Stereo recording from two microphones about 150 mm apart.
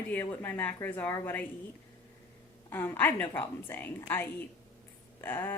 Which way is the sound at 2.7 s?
15° left (ahead or behind).